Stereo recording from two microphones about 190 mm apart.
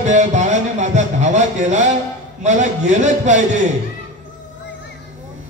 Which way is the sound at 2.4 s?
40° right (ahead or behind).